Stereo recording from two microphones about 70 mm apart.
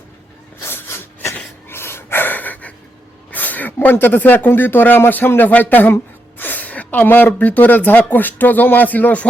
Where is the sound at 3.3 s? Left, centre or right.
Left.